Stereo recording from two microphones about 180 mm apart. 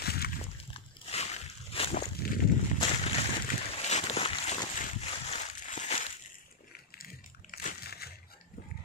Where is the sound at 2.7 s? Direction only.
35° left (ahead or behind).